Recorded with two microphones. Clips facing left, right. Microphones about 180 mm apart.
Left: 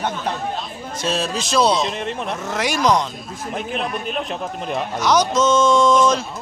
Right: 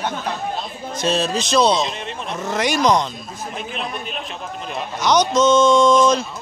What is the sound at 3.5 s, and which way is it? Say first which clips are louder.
Speech: left 5 dB; 55° left (ahead or behind).